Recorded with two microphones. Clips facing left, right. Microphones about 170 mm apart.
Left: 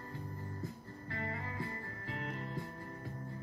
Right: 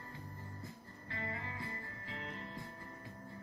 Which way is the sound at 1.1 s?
40° left (ahead or behind).